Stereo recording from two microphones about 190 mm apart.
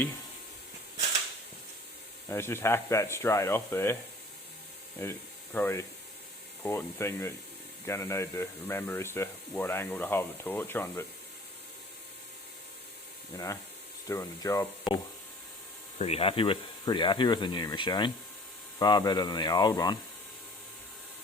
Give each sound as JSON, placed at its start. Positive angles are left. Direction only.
{"t": 2.3, "sound": "speech", "side_deg": 15}
{"t": 5.0, "sound": "speech", "side_deg": 15}
{"t": 13.3, "sound": "speech", "side_deg": 15}
{"t": 16.0, "sound": "speech", "side_deg": 30}